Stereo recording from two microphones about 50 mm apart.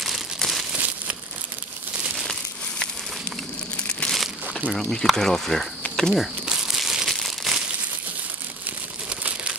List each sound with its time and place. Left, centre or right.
0.4 s crumpling: centre
4.1 s crumpling: centre
4.7 s speech: centre
6.4 s crumpling: centre
9.2 s crumpling: right